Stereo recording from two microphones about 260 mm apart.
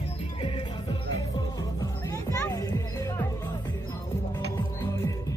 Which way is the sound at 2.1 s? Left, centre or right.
Centre.